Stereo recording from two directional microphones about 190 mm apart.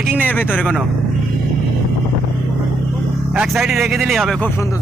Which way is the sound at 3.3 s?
Centre (ahead or behind).